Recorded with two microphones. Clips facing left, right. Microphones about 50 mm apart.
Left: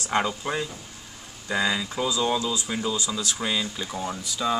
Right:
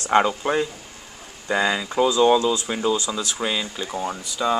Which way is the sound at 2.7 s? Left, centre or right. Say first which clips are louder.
Right 5 dB; right.